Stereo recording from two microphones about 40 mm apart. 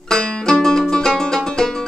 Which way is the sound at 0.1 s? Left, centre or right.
Centre.